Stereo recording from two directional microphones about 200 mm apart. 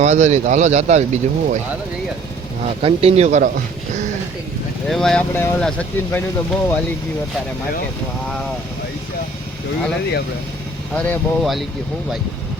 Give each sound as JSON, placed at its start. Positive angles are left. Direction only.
{"t": 0.0, "sound": "speech", "side_deg": -35}
{"t": 2.6, "sound": "speech", "side_deg": -30}
{"t": 4.9, "sound": "speech", "side_deg": 0}
{"t": 10.9, "sound": "speech", "side_deg": 5}